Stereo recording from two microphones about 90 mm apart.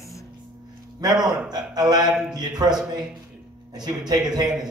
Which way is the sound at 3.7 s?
50° right (ahead or behind).